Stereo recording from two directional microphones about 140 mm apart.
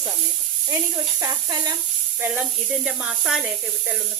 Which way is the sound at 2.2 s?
10° right (ahead or behind).